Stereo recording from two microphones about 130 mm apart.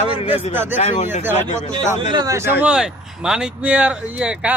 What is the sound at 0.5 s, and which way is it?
Speech, 15° right (ahead or behind).